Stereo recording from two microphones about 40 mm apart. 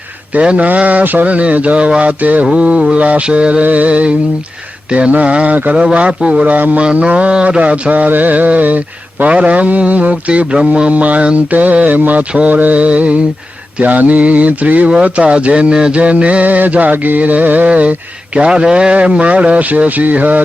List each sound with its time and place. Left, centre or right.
0.4 s mantra: right
3.6 s mantra: right
6.4 s mantra: right
13.8 s mantra: right
17.7 s mantra: right
18.3 s mantra: right
19.2 s mantra: right